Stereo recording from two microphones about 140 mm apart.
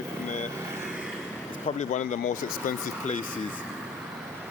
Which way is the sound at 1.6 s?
60° left (ahead or behind).